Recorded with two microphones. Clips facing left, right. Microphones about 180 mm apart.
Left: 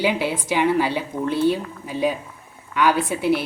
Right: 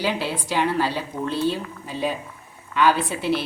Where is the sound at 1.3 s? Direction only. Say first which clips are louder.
Left 4 dB; 55° left (ahead or behind).